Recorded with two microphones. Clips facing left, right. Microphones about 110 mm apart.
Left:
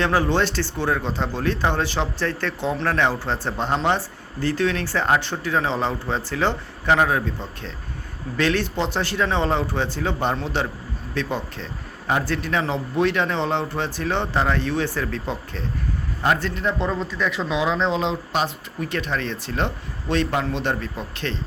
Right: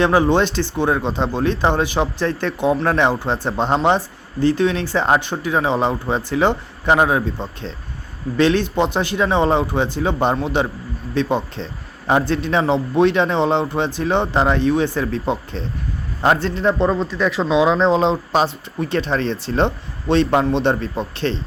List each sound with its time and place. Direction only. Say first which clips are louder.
0.0 s a man's voice: right 5 dB; 20° right (ahead or behind)